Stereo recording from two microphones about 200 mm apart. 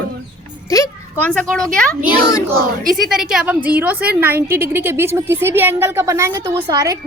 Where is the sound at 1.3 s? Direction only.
5° left (ahead or behind).